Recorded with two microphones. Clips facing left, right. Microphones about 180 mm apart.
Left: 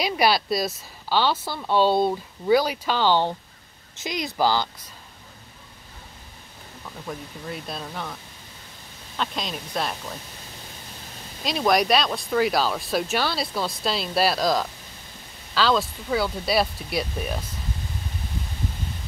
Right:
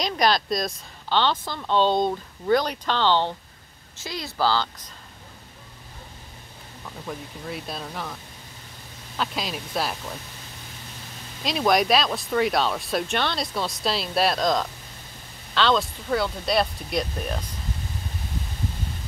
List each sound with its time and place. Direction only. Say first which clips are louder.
0.0 s a woman's voice: left 1 dB; 5° left (ahead or behind)
7.1 s speech: even; centre (ahead or behind)
11.4 s speech: even; centre (ahead or behind)